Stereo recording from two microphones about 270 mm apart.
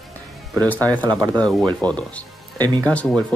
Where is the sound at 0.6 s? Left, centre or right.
Centre.